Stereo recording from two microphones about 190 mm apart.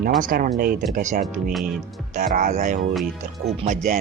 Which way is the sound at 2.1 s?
45° right (ahead or behind).